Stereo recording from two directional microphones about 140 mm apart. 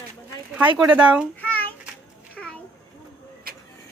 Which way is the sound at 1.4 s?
10° left (ahead or behind).